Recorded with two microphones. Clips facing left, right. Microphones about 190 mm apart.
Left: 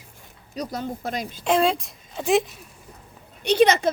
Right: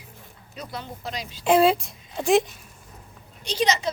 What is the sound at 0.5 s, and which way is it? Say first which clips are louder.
Speech: left 7 dB; 40° left (ahead or behind).